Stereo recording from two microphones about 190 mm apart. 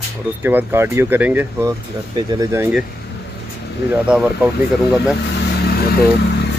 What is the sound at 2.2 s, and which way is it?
Speech, 20° right (ahead or behind).